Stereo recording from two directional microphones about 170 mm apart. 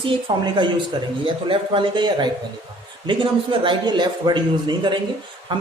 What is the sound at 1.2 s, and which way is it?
A man's voice, 30° right (ahead or behind).